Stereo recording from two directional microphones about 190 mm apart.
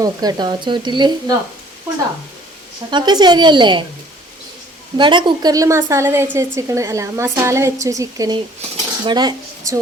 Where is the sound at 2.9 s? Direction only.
25° right (ahead or behind).